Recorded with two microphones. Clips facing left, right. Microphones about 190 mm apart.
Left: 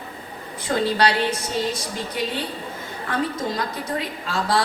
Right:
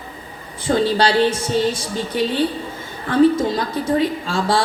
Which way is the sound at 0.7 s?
30° right (ahead or behind).